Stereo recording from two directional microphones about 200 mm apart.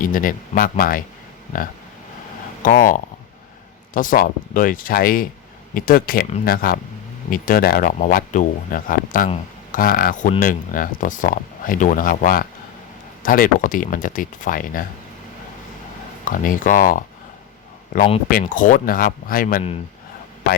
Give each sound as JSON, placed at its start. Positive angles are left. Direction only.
{"t": 0.0, "sound": "speech", "side_deg": 45}
{"t": 2.6, "sound": "speech", "side_deg": 45}
{"t": 16.2, "sound": "speech", "side_deg": 40}
{"t": 18.3, "sound": "speech", "side_deg": 45}